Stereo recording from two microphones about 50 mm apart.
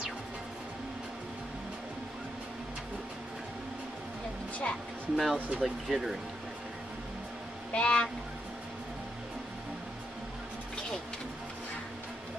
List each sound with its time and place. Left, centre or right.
5.1 s speech: centre
7.7 s speech: left